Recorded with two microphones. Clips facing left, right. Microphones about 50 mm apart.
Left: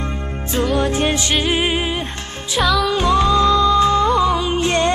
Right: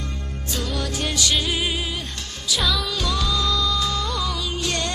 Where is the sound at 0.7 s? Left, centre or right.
Left.